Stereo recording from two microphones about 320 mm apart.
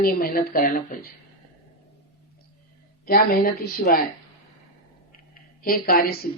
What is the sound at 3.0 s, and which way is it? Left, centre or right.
A woman's voice, left.